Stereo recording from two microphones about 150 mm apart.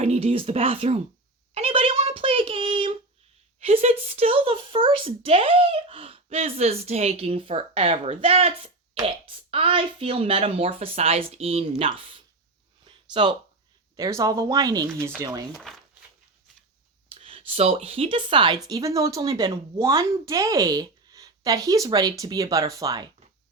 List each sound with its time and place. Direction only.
0.0 s speech: 40° right (ahead or behind)
1.5 s a sound: 40° right (ahead or behind)
3.6 s speech: 40° right (ahead or behind)
12.8 s a sound: 35° right (ahead or behind)
13.9 s speech: 20° right (ahead or behind)
15.5 s speech: centre (ahead or behind)
17.2 s speech: 40° right (ahead or behind)
18.7 s speech: 20° right (ahead or behind)